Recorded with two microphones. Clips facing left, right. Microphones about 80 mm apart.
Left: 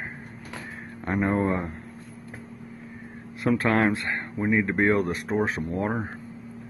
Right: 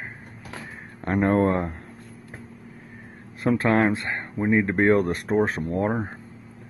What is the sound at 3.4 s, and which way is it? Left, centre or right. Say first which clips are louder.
Speech: right 2 dB; right.